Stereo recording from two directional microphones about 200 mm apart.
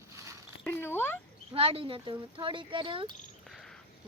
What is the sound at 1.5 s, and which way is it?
Speech, 30° right (ahead or behind).